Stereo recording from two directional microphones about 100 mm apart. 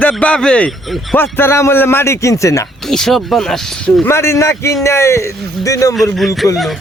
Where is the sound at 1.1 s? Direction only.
20° left (ahead or behind).